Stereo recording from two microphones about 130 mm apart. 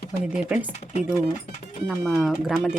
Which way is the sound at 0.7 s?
65° left (ahead or behind).